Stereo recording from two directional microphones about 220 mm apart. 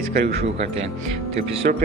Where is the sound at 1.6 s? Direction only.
40° right (ahead or behind).